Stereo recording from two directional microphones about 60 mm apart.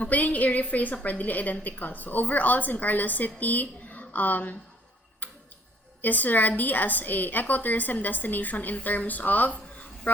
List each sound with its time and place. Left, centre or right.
0.0 s a woman's voice: left
5.2 s tick-tock: left
6.0 s a woman's voice: left